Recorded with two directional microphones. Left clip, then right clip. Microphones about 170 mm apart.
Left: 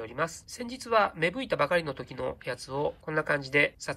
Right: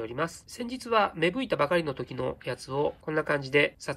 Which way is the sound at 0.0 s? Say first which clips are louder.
Even; 10° right (ahead or behind).